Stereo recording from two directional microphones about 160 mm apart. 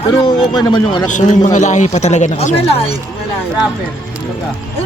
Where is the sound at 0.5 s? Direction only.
25° left (ahead or behind).